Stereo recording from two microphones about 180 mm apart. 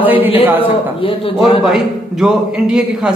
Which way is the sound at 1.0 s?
30° left (ahead or behind).